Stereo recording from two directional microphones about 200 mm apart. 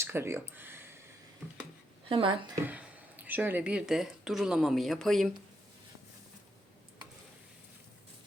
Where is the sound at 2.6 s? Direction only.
10° right (ahead or behind).